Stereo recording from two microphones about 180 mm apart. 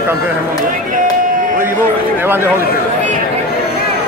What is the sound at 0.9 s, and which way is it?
Chop, 50° right (ahead or behind).